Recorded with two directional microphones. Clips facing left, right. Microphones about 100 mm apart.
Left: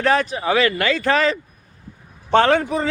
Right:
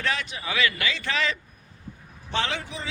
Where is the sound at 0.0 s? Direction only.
45° left (ahead or behind).